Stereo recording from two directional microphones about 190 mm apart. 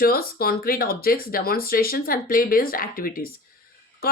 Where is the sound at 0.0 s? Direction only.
50° left (ahead or behind).